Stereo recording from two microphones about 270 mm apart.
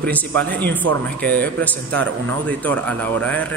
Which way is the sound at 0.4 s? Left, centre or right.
Centre.